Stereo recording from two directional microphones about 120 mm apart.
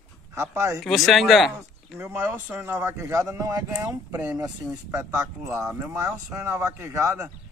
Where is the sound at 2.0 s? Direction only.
20° right (ahead or behind).